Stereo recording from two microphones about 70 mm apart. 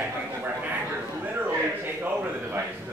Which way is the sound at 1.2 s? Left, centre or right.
Right.